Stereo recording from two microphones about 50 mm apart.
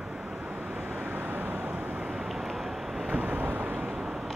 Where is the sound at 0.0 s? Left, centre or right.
Centre; by 2.0 s right.